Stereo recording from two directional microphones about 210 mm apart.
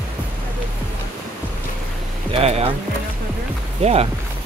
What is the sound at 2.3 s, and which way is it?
Music, 30° right (ahead or behind).